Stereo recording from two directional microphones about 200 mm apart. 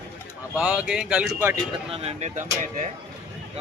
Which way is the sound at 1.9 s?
30° right (ahead or behind).